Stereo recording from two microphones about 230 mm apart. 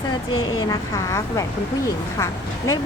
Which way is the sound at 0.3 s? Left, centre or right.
Centre.